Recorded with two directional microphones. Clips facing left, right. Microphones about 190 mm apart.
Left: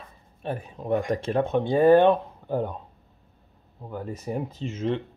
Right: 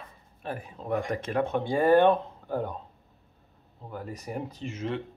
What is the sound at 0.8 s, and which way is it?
Speech, 25° left (ahead or behind).